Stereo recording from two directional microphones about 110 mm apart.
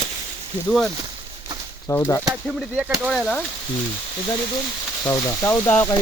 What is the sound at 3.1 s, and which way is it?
Speech, 5° left (ahead or behind).